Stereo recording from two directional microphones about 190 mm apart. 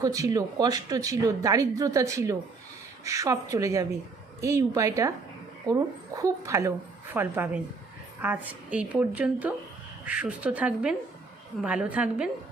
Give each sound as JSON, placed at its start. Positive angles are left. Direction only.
{"t": 0.0, "sound": "speech", "side_deg": -20}